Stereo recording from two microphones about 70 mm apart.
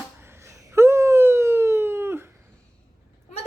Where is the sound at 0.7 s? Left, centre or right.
Right.